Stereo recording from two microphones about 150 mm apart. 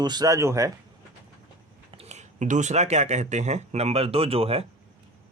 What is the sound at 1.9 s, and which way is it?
Speech, 45° right (ahead or behind).